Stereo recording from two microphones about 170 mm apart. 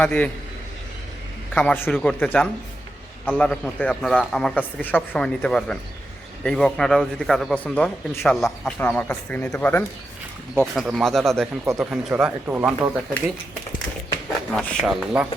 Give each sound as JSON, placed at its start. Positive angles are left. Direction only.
{"t": 0.0, "sound": "speech", "side_deg": 10}
{"t": 1.5, "sound": "a man's voice", "side_deg": 10}
{"t": 8.3, "sound": "a man's voice", "side_deg": 0}
{"t": 11.6, "sound": "speech", "side_deg": -15}
{"t": 11.9, "sound": "a man's voice", "side_deg": -5}
{"t": 14.5, "sound": "a man's voice", "side_deg": 5}